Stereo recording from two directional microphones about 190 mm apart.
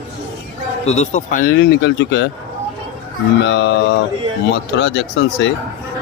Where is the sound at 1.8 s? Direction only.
70° left (ahead or behind).